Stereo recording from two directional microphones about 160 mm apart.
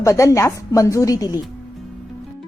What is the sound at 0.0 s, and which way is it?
Speech, 20° left (ahead or behind).